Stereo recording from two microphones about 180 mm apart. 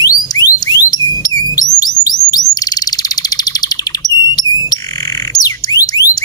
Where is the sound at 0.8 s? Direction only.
20° left (ahead or behind).